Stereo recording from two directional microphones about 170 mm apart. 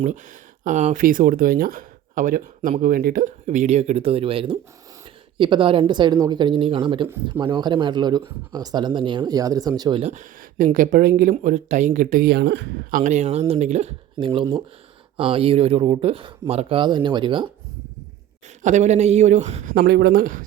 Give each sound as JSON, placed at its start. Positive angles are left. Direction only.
{"t": 0.0, "sound": "speech", "side_deg": -45}
{"t": 10.0, "sound": "speech", "side_deg": -45}
{"t": 12.2, "sound": "speech", "side_deg": -80}
{"t": 12.9, "sound": "speech", "side_deg": -45}
{"t": 18.6, "sound": "speech", "side_deg": -45}
{"t": 19.7, "sound": "speech", "side_deg": -70}